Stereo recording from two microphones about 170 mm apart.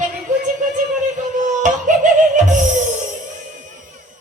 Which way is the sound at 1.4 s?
50° right (ahead or behind).